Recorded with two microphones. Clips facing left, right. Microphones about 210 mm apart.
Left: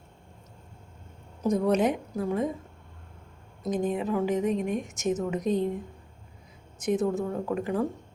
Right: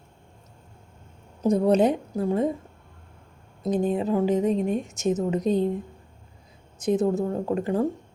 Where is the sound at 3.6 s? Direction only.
30° right (ahead or behind).